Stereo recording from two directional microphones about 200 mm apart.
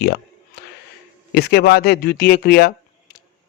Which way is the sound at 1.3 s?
55° left (ahead or behind).